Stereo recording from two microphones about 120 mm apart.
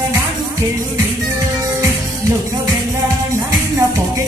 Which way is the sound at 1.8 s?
25° right (ahead or behind).